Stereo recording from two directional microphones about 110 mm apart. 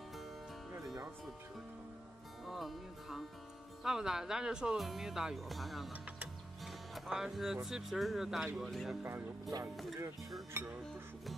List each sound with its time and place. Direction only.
2.4 s speech: centre (ahead or behind)
9.5 s speech: 40° right (ahead or behind)
10.5 s speech: 25° right (ahead or behind)